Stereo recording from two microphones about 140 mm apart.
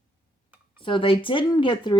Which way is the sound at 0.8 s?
35° left (ahead or behind).